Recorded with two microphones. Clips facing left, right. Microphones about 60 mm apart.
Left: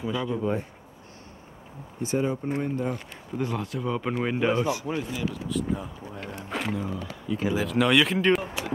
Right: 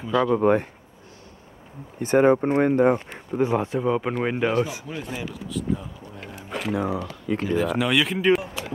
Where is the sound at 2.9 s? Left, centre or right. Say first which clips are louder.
Right 7 dB; right.